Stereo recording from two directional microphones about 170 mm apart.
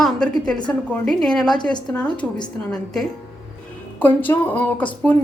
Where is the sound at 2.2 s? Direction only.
25° left (ahead or behind).